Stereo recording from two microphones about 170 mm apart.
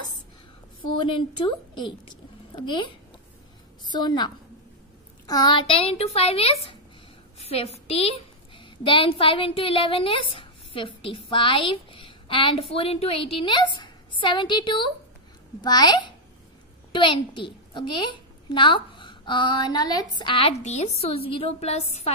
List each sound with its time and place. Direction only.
1.0 s a woman's voice: 30° left (ahead or behind)